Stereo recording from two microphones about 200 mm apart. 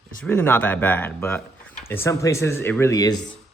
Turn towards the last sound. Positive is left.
turn(degrees=20)  # may be behind; listen again after turning